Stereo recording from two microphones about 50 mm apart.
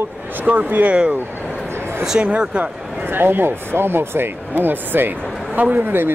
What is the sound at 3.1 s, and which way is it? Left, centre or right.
Speech, right.